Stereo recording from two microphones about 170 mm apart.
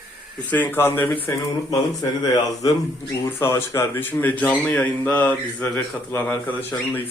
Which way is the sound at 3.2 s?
15° left (ahead or behind).